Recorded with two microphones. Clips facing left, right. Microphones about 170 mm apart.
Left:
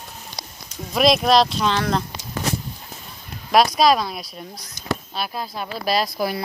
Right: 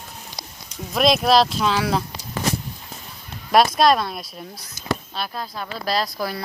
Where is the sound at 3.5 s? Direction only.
Centre (ahead or behind).